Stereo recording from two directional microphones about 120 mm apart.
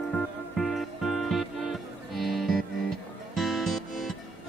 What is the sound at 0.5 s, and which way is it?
Music, centre (ahead or behind).